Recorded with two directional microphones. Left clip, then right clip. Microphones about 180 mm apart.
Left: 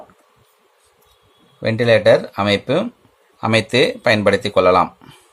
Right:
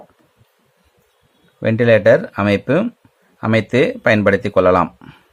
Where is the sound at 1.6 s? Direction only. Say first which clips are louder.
Right 1 dB; 30° right (ahead or behind).